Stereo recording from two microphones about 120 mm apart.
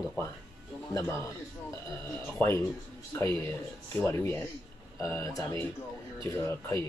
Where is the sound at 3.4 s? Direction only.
20° left (ahead or behind).